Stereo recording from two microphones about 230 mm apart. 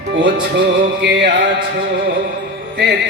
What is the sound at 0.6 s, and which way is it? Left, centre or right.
Music, right.